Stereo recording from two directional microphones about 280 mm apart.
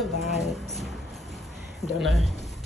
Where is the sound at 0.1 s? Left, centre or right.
Left.